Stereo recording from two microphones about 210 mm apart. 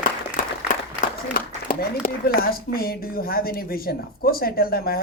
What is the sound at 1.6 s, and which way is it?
Speech, 45° left (ahead or behind).